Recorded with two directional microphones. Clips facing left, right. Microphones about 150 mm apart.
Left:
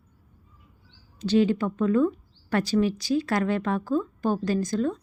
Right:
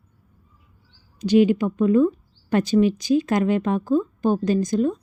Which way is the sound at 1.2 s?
15° right (ahead or behind).